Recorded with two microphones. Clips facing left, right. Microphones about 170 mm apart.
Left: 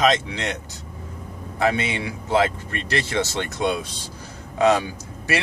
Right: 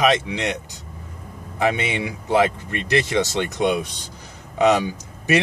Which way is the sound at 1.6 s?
15° right (ahead or behind).